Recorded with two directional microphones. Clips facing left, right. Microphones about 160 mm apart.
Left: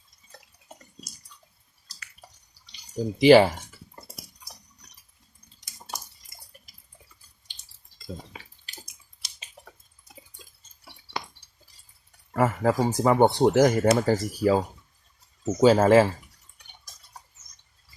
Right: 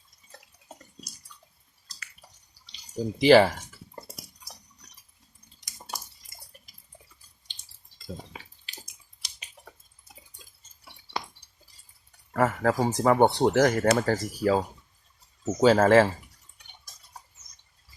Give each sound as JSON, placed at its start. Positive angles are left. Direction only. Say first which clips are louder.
{"t": 2.9, "sound": "speech", "louder": "left 2 dB", "side_deg": 5}
{"t": 12.3, "sound": "a sound", "louder": "left 1 dB", "side_deg": 15}
{"t": 12.7, "sound": "speech", "louder": "left 1 dB", "side_deg": 0}
{"t": 15.6, "sound": "speech", "louder": "left 1 dB", "side_deg": 5}